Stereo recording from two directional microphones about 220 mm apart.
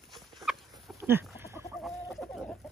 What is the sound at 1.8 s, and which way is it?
Chicken, centre (ahead or behind).